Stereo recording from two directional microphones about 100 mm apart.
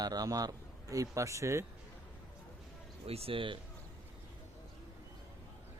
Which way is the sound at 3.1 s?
75° right (ahead or behind).